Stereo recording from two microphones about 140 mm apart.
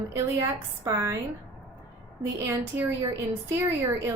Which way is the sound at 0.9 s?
20° right (ahead or behind).